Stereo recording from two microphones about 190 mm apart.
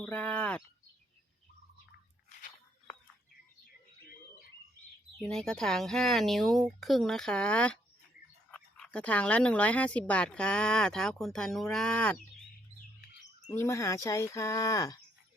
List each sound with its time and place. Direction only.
0.0 s speech: 5° left (ahead or behind)
5.2 s speech: 5° left (ahead or behind)
13.5 s speech: 15° left (ahead or behind)